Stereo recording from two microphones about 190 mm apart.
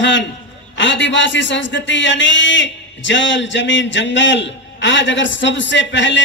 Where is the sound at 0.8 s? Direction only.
70° left (ahead or behind).